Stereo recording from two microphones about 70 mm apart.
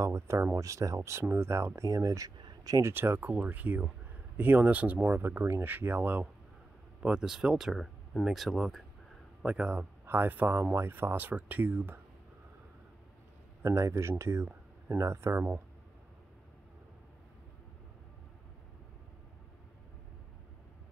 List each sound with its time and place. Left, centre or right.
0.0 s speech: right
1.8 s speech: right
2.4 s a sound: right
2.8 s speech: right
7.0 s speech: centre
9.4 s speech: centre
9.8 s speech: right
13.7 s speech: right